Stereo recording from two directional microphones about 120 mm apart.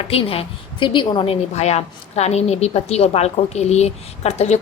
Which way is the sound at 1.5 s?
65° left (ahead or behind).